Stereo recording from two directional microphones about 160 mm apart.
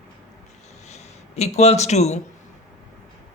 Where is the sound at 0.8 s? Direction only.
45° left (ahead or behind).